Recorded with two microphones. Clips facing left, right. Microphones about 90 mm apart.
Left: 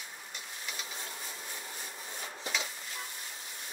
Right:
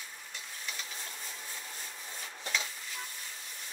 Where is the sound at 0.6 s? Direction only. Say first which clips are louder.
Left 1 dB; 15° left (ahead or behind).